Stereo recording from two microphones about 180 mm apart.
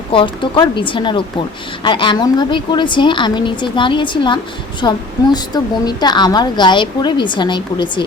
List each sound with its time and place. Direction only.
0.1 s a woman's voice: 30° left (ahead or behind)